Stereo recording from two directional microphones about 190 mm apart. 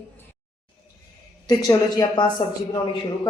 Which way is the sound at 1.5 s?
20° left (ahead or behind).